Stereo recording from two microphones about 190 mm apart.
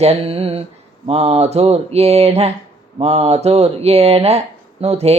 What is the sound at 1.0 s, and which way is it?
Speech, 30° right (ahead or behind).